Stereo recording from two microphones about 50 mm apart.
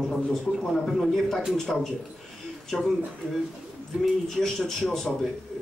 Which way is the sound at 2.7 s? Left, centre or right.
Left.